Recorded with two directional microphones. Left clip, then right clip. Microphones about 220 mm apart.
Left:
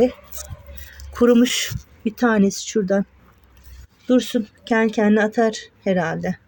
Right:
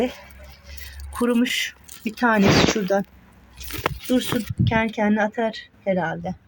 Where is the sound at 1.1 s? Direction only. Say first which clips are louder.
Left 6 dB; 25° left (ahead or behind).